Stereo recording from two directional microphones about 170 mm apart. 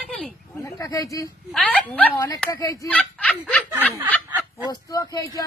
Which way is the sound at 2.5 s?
20° left (ahead or behind).